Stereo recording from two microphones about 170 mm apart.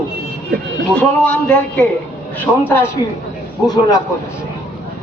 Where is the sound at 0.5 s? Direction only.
70° right (ahead or behind).